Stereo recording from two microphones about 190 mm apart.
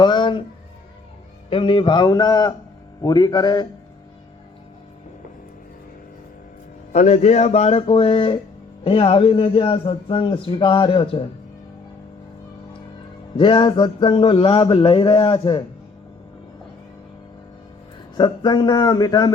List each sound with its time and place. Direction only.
0.0 s speech: 25° left (ahead or behind)
1.5 s a man's voice: 30° left (ahead or behind)
6.9 s a man's voice: 35° left (ahead or behind)
13.3 s a man's voice: 25° left (ahead or behind)
18.2 s a man's voice: 20° left (ahead or behind)